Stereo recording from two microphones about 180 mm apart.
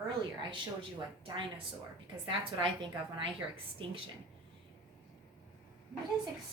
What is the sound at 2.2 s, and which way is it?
Speech, 25° right (ahead or behind).